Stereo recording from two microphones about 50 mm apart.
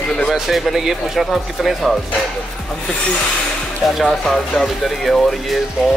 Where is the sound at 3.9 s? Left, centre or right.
Centre.